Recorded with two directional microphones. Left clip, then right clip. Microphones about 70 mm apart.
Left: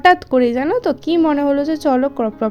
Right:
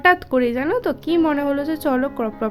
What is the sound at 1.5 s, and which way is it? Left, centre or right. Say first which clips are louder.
A woman's voice: left 5 dB; left.